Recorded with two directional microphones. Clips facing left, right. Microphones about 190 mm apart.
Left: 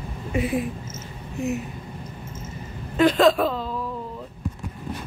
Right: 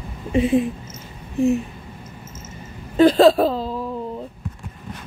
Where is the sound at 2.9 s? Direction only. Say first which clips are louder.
Right 5 dB; 35° right (ahead or behind).